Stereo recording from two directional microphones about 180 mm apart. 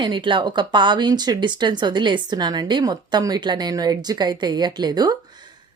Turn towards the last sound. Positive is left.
turn(degrees=-20)  # may be behind; listen again after turning